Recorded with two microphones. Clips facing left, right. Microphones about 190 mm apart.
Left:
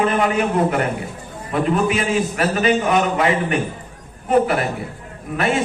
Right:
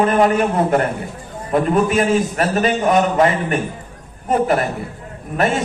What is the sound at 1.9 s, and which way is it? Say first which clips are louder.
Speech: right 3 dB; 40° right (ahead or behind).